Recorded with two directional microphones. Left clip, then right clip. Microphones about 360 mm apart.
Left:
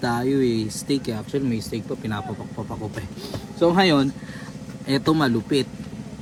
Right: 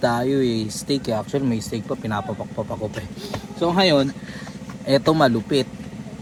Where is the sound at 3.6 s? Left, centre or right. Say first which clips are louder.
Even; centre.